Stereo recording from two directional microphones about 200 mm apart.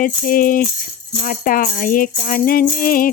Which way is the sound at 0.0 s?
45° left (ahead or behind).